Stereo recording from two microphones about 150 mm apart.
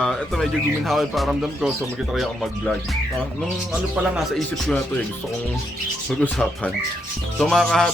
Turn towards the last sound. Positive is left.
turn(degrees=5)  # may be behind; listen again after turning